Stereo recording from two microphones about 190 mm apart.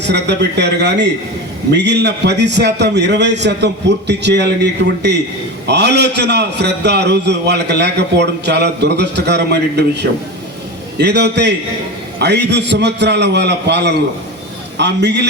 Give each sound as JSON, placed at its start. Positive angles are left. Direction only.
{"t": 0.1, "sound": "a man's voice", "side_deg": -65}